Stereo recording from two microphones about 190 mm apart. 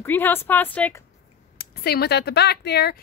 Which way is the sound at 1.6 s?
55° left (ahead or behind).